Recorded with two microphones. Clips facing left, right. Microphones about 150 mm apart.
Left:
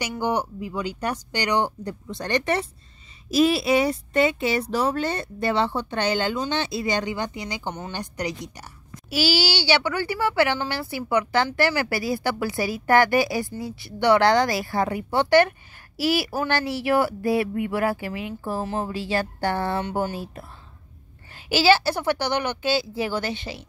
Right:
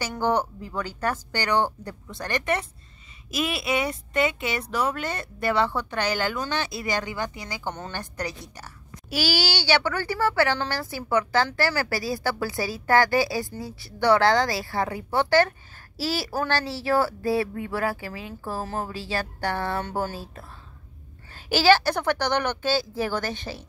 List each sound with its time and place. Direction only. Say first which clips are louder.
0.1 s a child's voice: right 2 dB; 15° left (ahead or behind)
9.1 s a child's voice: left 3 dB; 50° right (ahead or behind)
9.8 s speech: left 1 dB; 15° left (ahead or behind)
11.8 s speech: left 2 dB; 35° right (ahead or behind)
12.2 s a child's voice: left 2 dB; 20° left (ahead or behind)
16.0 s speech: left 5 dB; 35° right (ahead or behind)
16.8 s a child's voice: left 1 dB; 20° left (ahead or behind)
21.3 s a sound: even; 45° right (ahead or behind)
21.8 s speech: left 1 dB; 10° left (ahead or behind)
22.7 s a child's voice: left 3 dB; 45° right (ahead or behind)
23.3 s speech: left 1 dB; 10° left (ahead or behind)